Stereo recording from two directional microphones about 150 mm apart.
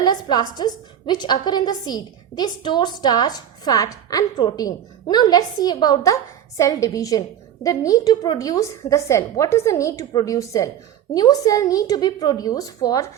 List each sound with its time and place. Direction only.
0.0 s a woman's voice: 30° left (ahead or behind)